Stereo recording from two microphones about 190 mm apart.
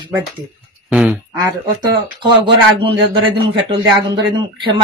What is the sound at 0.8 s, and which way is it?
Quack, 5° right (ahead or behind).